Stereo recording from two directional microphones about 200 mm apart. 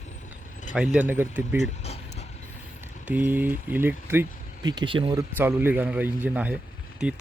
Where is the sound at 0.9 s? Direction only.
10° right (ahead or behind).